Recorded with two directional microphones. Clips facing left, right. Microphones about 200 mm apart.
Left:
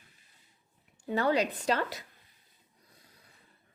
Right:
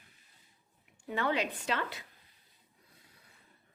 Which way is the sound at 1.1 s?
40° left (ahead or behind).